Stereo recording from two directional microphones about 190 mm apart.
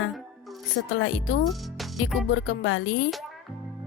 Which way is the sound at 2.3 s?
90° left.